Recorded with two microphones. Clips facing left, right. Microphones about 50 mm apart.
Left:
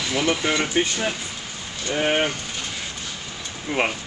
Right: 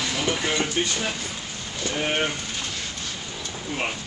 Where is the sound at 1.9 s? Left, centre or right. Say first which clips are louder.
Left 5 dB; left.